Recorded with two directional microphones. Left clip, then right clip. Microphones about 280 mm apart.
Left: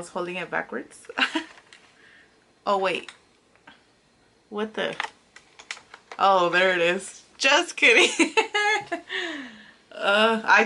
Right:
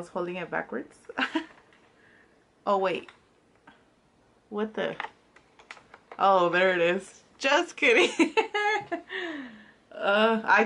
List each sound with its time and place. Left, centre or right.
0.0 s speech: centre
2.6 s speech: centre
4.6 s speech: centre